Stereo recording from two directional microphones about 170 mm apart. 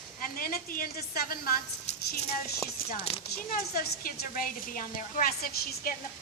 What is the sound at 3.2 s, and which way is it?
Speech, 60° left (ahead or behind).